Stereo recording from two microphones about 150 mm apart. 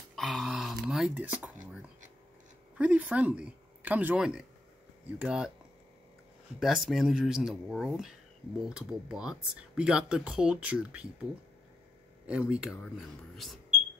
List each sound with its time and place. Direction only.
0.1 s a sound: centre (ahead or behind)
2.8 s speech: 10° right (ahead or behind)
6.6 s speech: centre (ahead or behind)
12.3 s speech: 5° right (ahead or behind)